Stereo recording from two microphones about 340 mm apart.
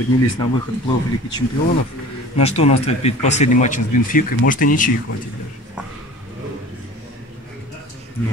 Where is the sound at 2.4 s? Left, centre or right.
Centre.